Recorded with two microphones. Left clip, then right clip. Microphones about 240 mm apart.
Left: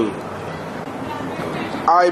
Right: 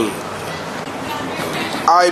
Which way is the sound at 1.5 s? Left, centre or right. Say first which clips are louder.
Right 2 dB; centre.